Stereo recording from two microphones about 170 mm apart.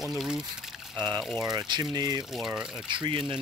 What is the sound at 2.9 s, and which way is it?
Speech, 30° right (ahead or behind).